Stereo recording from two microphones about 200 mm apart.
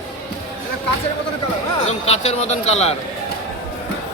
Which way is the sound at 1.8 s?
35° left (ahead or behind).